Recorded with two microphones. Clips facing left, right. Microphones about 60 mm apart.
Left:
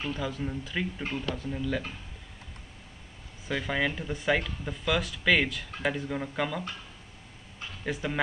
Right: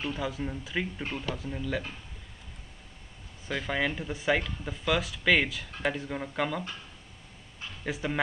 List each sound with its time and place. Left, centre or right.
0.0 s speech: centre
3.4 s speech: centre
7.8 s speech: centre